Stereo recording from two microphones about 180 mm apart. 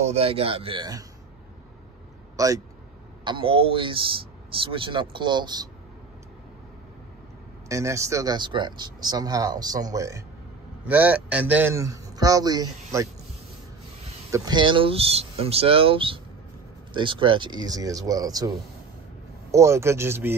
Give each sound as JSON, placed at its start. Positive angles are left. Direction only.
{"t": 0.0, "sound": "speech", "side_deg": -35}
{"t": 2.3, "sound": "speech", "side_deg": -20}
{"t": 7.6, "sound": "a man's voice", "side_deg": -15}
{"t": 14.3, "sound": "speech", "side_deg": -20}
{"t": 19.5, "sound": "a man's voice", "side_deg": -15}